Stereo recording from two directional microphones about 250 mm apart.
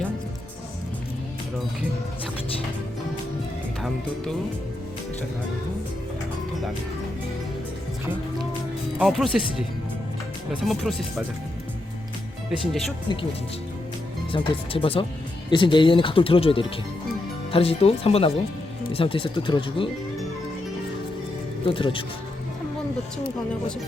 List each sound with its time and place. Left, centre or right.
3.8 s speech: centre
9.0 s speech: centre
10.5 s speech: centre
13.1 s speech: centre
14.3 s speech: centre
21.7 s speech: left